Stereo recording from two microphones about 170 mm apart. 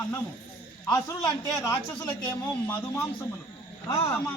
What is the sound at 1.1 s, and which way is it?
A man's voice, 20° left (ahead or behind).